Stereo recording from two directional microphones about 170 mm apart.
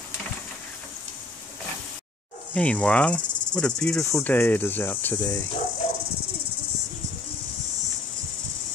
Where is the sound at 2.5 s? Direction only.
10° left (ahead or behind).